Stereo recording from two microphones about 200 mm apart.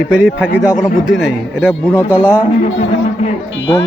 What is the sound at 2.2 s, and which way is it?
Speech, 5° right (ahead or behind).